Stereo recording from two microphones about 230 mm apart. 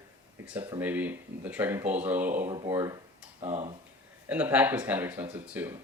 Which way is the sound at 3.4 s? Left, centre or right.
Right.